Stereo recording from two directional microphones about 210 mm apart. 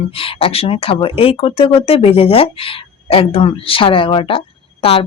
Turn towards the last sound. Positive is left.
turn(degrees=25)  # may be behind; listen again after turning